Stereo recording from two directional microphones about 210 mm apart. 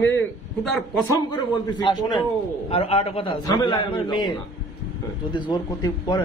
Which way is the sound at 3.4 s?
15° left (ahead or behind).